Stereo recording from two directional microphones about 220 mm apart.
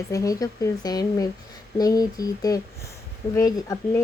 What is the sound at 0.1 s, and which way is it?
Speech, 15° left (ahead or behind).